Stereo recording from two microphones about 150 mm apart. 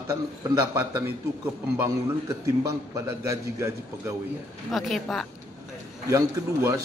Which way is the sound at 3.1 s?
20° right (ahead or behind).